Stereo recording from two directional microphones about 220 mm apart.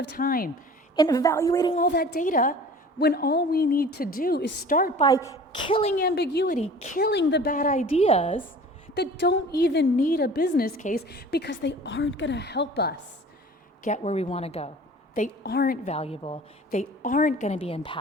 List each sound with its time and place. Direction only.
0.0 s a woman's voice: 45° left (ahead or behind)
0.9 s a woman's voice: 15° left (ahead or behind)
1.7 s a woman's voice: 45° left (ahead or behind)
4.9 s a woman's voice: 15° left (ahead or behind)
6.0 s a woman's voice: 45° left (ahead or behind)
6.6 s a woman's voice: 30° left (ahead or behind)
7.0 s a woman's voice: 50° left (ahead or behind); by 8.4 s 30° left (ahead or behind)
9.0 s a woman's voice: 45° left (ahead or behind)
13.8 s a woman's voice: 30° left (ahead or behind)
15.4 s a woman's voice: 45° left (ahead or behind)
16.0 s a woman's voice: 25° left (ahead or behind)